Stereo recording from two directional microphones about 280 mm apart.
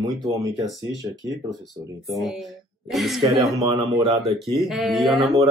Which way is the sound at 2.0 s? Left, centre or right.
Centre.